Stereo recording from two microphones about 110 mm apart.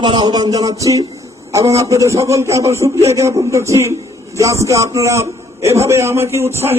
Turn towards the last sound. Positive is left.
turn(degrees=-25)  # may be behind; listen again after turning